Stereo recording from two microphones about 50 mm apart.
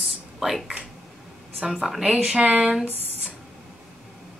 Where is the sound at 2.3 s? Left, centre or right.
Right.